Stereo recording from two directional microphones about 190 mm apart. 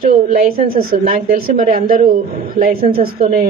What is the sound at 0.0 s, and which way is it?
A woman's voice, 45° right (ahead or behind).